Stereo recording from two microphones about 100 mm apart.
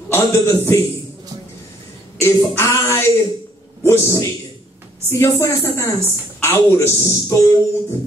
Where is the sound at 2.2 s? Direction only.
30° left (ahead or behind).